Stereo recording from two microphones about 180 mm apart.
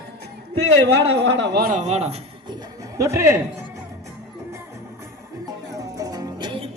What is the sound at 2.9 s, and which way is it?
Speech, 15° right (ahead or behind).